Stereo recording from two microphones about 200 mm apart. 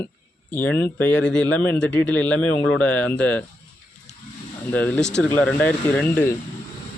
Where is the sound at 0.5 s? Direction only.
10° left (ahead or behind).